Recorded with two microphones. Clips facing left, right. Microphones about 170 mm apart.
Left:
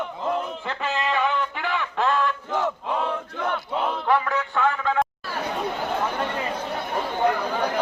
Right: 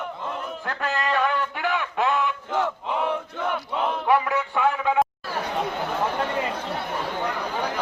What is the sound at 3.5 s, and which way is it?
Music, 10° right (ahead or behind).